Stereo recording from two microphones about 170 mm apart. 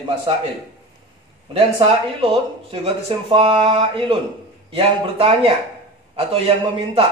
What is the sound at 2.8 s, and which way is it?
A man's voice, 35° right (ahead or behind).